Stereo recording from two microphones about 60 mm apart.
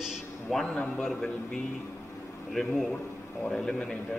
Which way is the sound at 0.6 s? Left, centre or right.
Left.